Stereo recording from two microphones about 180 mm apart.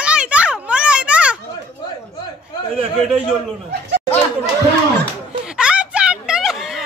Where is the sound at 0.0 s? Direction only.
5° right (ahead or behind).